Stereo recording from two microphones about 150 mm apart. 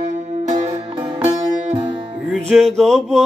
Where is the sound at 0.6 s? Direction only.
15° right (ahead or behind).